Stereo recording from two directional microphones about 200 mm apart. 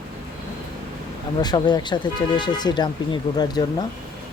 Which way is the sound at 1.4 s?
20° left (ahead or behind).